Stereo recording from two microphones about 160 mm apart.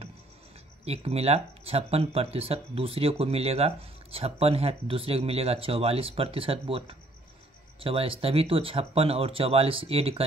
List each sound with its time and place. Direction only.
0.8 s speech: 40° right (ahead or behind)